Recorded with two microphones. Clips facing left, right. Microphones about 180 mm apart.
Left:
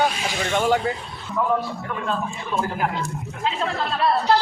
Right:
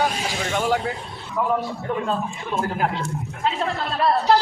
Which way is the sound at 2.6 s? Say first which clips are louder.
Right 1 dB; 40° right (ahead or behind).